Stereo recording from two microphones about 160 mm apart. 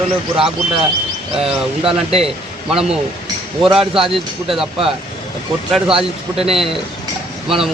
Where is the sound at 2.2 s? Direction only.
5° right (ahead or behind).